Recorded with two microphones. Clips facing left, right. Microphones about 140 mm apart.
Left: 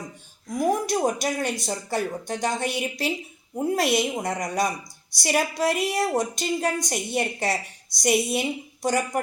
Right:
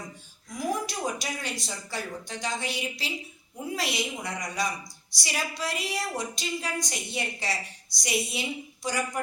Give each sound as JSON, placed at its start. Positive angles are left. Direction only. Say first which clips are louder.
{"t": 0.5, "sound": "a woman's voice", "louder": "left 8 dB", "side_deg": 50}